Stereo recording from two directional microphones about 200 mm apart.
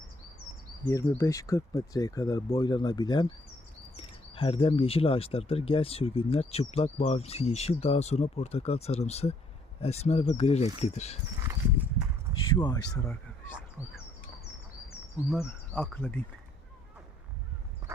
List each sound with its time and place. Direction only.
0.9 s speech: 15° left (ahead or behind); by 11.2 s 35° left (ahead or behind)
12.5 s speech: 25° left (ahead or behind)
15.4 s speech: 10° left (ahead or behind)
17.8 s horse: 15° right (ahead or behind)